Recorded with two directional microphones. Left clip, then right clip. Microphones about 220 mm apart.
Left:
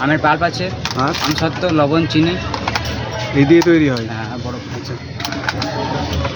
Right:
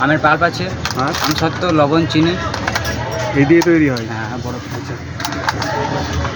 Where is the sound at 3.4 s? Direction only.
15° left (ahead or behind).